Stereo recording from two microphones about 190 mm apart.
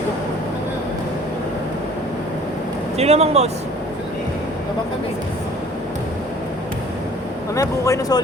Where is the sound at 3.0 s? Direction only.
35° right (ahead or behind).